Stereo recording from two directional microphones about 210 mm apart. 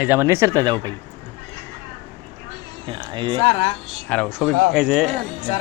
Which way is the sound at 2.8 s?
20° right (ahead or behind).